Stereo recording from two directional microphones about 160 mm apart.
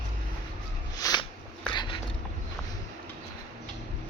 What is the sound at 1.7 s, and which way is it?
Dog, 30° left (ahead or behind).